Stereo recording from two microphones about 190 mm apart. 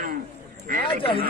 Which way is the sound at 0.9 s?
30° left (ahead or behind).